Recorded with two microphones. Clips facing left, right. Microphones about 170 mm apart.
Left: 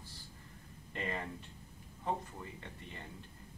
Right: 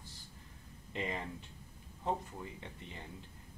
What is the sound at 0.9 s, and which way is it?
Speech, 15° right (ahead or behind).